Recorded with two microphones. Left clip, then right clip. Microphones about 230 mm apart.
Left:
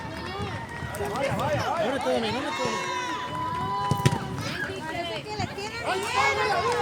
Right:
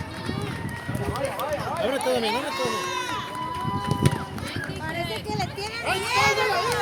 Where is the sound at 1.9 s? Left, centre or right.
Right.